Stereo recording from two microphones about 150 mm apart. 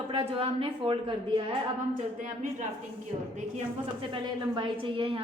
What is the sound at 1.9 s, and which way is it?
Speech, 60° right (ahead or behind).